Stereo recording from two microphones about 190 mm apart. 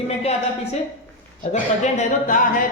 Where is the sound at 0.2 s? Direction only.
35° left (ahead or behind).